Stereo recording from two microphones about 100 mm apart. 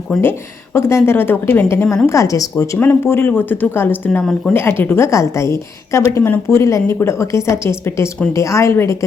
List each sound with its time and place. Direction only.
0.2 s a woman's voice: 25° left (ahead or behind)
2.7 s a woman's voice: 20° left (ahead or behind)